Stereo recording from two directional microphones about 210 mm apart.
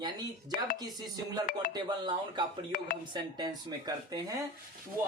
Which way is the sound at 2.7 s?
40° left (ahead or behind).